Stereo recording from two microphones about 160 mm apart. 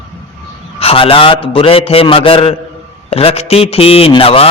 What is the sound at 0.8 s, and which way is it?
A man's voice, 35° left (ahead or behind).